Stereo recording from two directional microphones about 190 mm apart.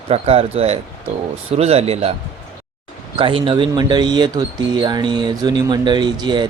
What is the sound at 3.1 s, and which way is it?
Speech, 25° right (ahead or behind).